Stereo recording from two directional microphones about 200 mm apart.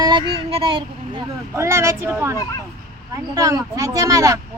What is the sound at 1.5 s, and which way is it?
Speech, 15° right (ahead or behind).